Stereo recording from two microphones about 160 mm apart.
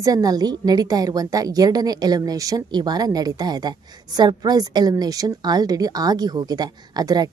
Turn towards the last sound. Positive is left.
turn(degrees=-25)  # may be behind; listen again after turning